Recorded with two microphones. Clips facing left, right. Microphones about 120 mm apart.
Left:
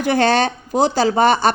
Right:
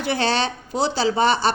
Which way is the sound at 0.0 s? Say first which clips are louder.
Left 6 dB; 50° left (ahead or behind).